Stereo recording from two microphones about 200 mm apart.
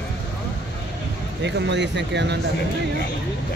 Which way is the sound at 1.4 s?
60° right (ahead or behind).